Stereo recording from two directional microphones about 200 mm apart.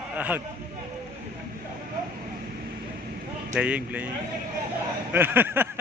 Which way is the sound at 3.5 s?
5° right (ahead or behind).